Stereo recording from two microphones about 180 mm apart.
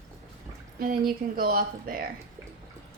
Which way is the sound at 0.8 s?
55° right (ahead or behind).